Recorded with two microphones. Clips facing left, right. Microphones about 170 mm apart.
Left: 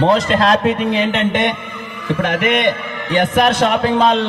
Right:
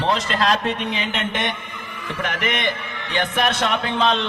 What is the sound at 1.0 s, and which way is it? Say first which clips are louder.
Speech: left 9 dB; 55° left (ahead or behind).